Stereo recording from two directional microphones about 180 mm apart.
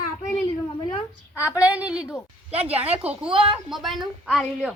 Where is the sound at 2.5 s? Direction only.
35° right (ahead or behind).